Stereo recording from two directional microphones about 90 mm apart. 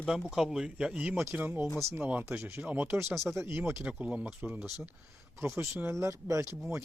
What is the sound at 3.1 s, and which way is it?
Speech, centre (ahead or behind).